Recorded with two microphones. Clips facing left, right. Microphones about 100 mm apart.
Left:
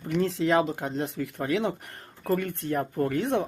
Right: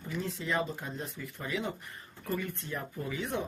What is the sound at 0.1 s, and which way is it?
Speech, 90° left.